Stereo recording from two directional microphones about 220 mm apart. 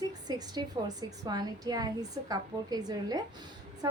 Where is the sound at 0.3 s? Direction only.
20° right (ahead or behind).